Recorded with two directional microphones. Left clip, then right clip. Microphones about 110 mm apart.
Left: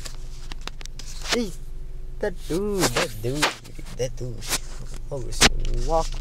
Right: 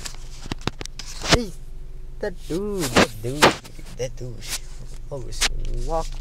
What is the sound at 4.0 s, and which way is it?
Speech, 15° left (ahead or behind).